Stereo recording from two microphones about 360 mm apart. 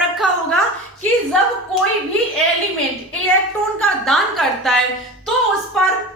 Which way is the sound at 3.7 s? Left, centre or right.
Centre.